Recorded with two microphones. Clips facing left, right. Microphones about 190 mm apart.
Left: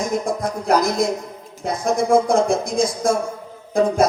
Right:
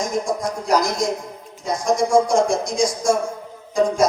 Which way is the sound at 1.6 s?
55° left (ahead or behind).